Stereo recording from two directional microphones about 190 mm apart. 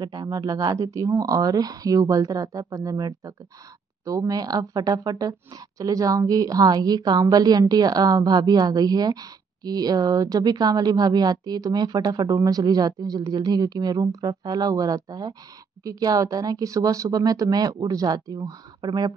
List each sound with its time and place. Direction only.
0.0 s a woman's voice: 20° right (ahead or behind)